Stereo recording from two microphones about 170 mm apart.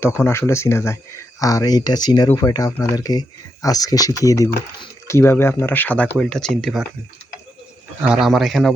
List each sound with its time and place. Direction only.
0.0 s speech: 15° left (ahead or behind)
8.0 s speech: 5° right (ahead or behind)